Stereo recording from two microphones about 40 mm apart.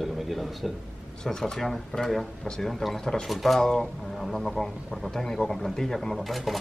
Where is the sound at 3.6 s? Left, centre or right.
Centre.